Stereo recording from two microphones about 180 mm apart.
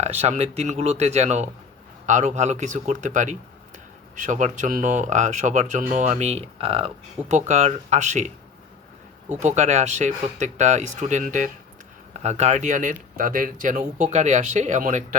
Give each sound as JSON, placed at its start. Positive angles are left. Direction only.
{"t": 0.0, "sound": "speech", "side_deg": -40}
{"t": 9.3, "sound": "speech", "side_deg": -40}